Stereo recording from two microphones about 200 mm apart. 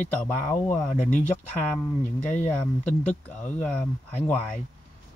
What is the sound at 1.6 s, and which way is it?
Speech, 10° left (ahead or behind).